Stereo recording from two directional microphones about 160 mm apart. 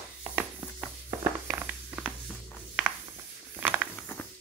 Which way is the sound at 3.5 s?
10° right (ahead or behind).